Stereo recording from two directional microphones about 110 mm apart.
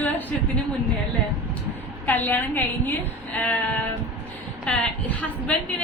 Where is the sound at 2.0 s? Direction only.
15° left (ahead or behind).